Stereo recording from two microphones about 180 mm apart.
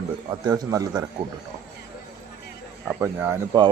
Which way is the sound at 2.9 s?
15° right (ahead or behind).